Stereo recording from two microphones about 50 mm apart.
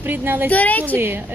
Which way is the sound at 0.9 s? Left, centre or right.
Right.